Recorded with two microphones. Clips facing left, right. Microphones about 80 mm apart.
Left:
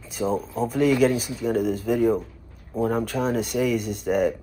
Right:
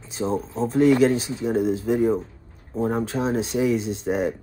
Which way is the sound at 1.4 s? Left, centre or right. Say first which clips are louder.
Right 1 dB; centre.